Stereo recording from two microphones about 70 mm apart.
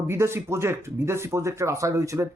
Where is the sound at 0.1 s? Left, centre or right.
Right.